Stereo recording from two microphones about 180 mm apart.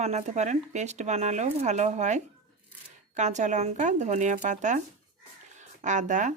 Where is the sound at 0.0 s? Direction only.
40° right (ahead or behind).